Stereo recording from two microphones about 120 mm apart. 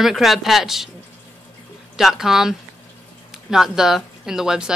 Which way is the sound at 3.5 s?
5° right (ahead or behind).